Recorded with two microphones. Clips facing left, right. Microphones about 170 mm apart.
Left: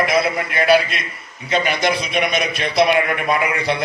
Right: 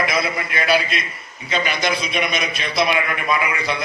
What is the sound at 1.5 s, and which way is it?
A man's voice, 55° left (ahead or behind).